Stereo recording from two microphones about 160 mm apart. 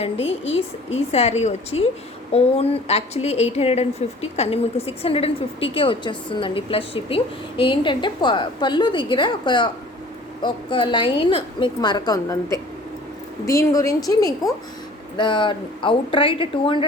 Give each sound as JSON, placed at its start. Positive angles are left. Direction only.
{"t": 0.0, "sound": "a woman's voice", "side_deg": 40}